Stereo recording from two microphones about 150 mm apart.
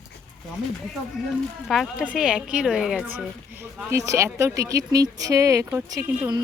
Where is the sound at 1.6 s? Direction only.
Centre (ahead or behind).